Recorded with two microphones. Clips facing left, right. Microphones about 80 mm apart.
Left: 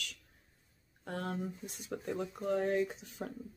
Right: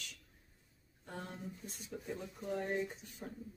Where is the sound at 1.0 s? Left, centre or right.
Left.